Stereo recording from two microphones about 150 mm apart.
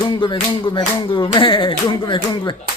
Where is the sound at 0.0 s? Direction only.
30° left (ahead or behind).